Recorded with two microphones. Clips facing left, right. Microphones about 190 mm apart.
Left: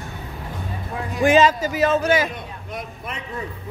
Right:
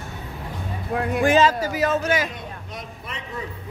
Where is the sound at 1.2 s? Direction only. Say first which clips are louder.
Left 3 dB; 20° left (ahead or behind).